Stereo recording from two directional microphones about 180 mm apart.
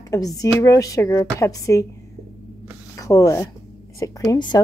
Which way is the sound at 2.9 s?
20° left (ahead or behind).